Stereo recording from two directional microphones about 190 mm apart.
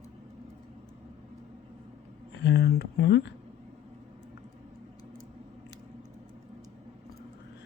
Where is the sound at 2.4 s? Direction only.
65° left (ahead or behind).